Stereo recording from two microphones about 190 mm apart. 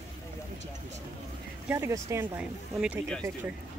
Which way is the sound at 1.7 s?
15° right (ahead or behind).